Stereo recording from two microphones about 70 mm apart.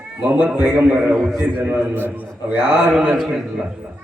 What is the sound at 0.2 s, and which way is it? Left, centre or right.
A man's voice, right.